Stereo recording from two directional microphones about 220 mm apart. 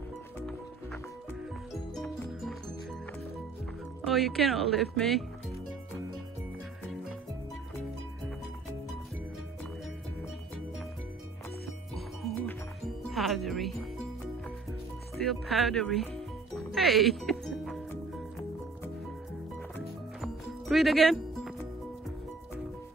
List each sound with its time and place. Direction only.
4.0 s speech: centre (ahead or behind)
11.9 s music: centre (ahead or behind)
15.2 s music: centre (ahead or behind)
20.2 s music: centre (ahead or behind)